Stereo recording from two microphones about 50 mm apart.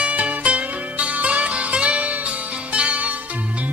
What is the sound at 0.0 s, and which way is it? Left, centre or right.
Music, right.